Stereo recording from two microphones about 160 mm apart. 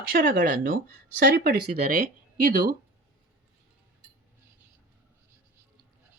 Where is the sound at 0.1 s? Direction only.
65° right (ahead or behind).